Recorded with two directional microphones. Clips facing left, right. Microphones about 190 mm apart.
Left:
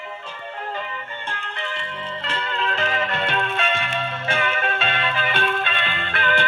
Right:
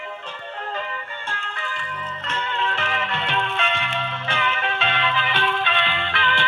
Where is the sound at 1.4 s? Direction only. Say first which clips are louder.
Left 2 dB; 20° left (ahead or behind); by 6.4 s 45° left (ahead or behind).